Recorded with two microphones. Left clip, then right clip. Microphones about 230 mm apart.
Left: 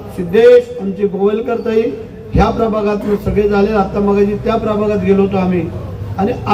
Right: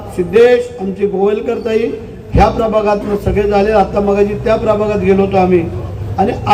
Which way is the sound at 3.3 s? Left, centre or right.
Right.